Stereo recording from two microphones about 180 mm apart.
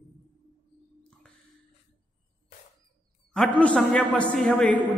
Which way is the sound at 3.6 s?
5° left (ahead or behind).